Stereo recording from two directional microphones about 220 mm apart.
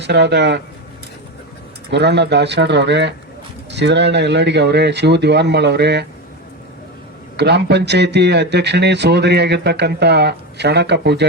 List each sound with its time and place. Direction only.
0.0 s speech: 50° right (ahead or behind)
1.9 s speech: 50° right (ahead or behind)
7.3 s speech: 50° right (ahead or behind)